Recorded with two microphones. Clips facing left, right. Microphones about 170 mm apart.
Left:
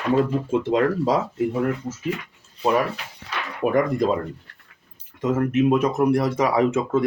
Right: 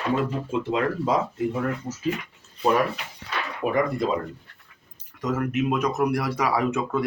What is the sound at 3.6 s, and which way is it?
Speech, 50° left (ahead or behind).